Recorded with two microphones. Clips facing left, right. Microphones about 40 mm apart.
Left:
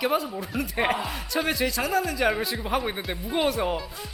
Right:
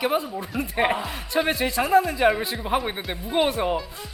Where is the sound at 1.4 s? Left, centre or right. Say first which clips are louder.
Right 2 dB; right; by 3.9 s centre.